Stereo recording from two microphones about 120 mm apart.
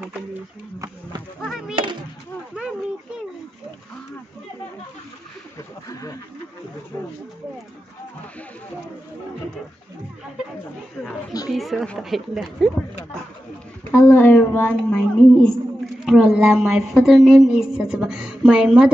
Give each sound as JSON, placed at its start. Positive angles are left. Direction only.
{"t": 1.4, "sound": "speech", "side_deg": -5}
{"t": 5.6, "sound": "speech", "side_deg": 30}
{"t": 11.5, "sound": "a woman's voice", "side_deg": 0}
{"t": 13.9, "sound": "a child's voice", "side_deg": 15}
{"t": 16.1, "sound": "a woman's voice", "side_deg": -5}